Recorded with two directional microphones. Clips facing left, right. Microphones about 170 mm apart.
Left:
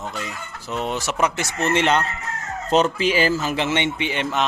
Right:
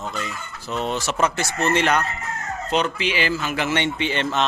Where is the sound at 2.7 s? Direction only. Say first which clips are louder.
Left 5 dB; 40° left (ahead or behind).